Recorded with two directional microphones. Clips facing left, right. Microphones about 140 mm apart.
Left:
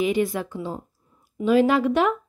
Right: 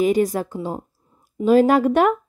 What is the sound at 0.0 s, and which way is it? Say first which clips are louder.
Speech: right 4 dB; 40° right (ahead or behind).